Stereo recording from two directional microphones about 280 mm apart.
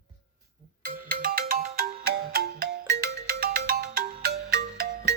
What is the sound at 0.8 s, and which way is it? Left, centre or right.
Ringtone, right.